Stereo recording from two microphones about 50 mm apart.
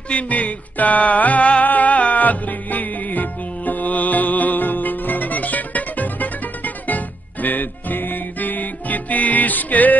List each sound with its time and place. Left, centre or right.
0.1 s music: left